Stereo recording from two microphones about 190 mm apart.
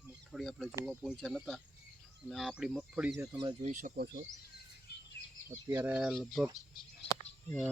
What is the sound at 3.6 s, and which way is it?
Speech, 45° right (ahead or behind).